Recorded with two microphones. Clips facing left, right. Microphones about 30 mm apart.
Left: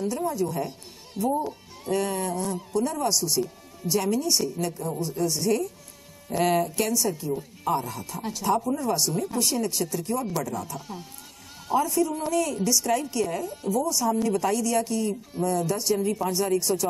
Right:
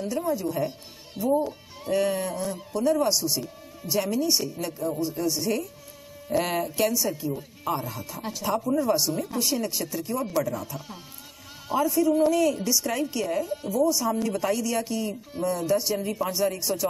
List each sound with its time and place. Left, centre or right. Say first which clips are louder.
0.0 s a woman's voice: even; centre